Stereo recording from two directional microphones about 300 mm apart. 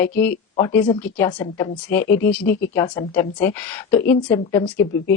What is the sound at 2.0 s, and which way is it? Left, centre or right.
Speech, left.